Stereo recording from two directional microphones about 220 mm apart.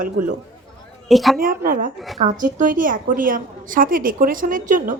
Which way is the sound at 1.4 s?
40° right (ahead or behind).